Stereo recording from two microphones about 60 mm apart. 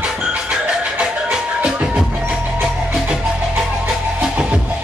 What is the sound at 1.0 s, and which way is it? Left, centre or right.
Music, centre.